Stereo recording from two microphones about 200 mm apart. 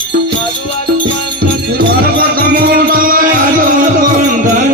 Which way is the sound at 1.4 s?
50° right (ahead or behind).